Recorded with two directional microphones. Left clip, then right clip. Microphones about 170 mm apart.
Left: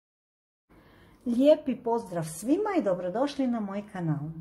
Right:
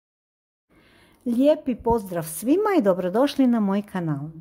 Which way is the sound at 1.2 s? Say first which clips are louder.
Right 2 dB; 40° right (ahead or behind).